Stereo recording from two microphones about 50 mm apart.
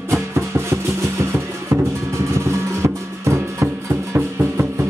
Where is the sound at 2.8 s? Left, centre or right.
Right.